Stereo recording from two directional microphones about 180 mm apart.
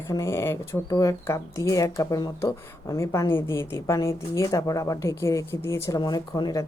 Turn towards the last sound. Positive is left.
turn(degrees=20)  # may be behind; listen again after turning